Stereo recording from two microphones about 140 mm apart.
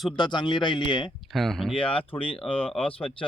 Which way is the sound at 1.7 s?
40° left (ahead or behind).